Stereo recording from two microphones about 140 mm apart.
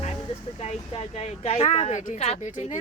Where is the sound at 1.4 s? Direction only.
50° left (ahead or behind).